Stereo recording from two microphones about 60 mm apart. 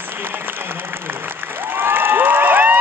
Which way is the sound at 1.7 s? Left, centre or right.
Right.